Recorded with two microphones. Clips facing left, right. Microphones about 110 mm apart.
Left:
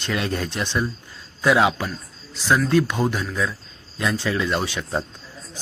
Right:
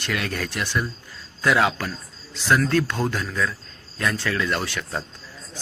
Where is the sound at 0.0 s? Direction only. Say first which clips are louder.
Left 2 dB; 25° left (ahead or behind).